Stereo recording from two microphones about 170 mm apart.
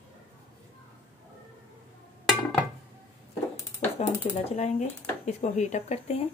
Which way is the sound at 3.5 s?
10° left (ahead or behind).